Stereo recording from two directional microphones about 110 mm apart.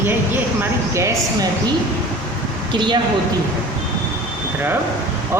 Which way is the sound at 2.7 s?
45° right (ahead or behind).